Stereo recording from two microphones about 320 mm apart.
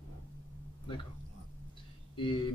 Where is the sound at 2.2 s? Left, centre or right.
Centre.